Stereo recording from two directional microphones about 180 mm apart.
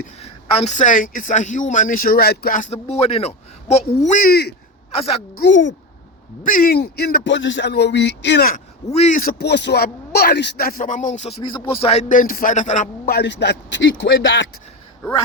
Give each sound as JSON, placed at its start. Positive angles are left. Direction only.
{"t": 0.2, "sound": "speech", "side_deg": 40}
{"t": 4.3, "sound": "speech", "side_deg": 65}
{"t": 5.4, "sound": "speech", "side_deg": 85}
{"t": 6.4, "sound": "speech", "side_deg": 50}
{"t": 8.9, "sound": "a man's voice", "side_deg": 40}
{"t": 9.4, "sound": "speech", "side_deg": 70}
{"t": 13.1, "sound": "a man's voice", "side_deg": 65}